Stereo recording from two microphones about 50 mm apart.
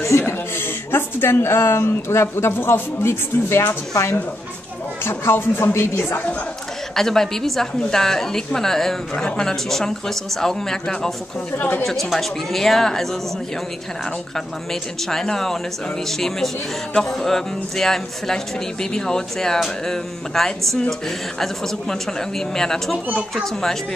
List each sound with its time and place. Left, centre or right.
0.2 s a woman's voice: left
5.0 s a woman's voice: left
7.0 s speech: centre
11.5 s a woman's voice: left
11.8 s speech: centre
14.3 s speech: centre